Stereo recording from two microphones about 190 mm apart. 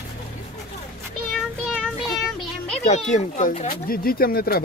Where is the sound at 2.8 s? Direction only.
40° left (ahead or behind).